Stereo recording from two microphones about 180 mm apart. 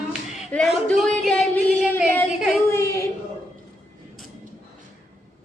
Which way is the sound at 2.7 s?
15° left (ahead or behind).